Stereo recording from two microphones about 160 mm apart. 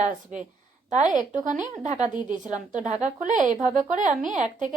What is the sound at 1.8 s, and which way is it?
A woman's voice, 50° right (ahead or behind).